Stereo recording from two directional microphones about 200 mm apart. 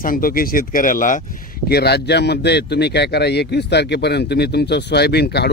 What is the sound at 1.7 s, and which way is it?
Speech, 55° left (ahead or behind).